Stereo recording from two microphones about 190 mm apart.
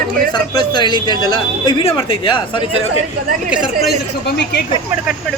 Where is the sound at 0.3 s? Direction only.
25° left (ahead or behind).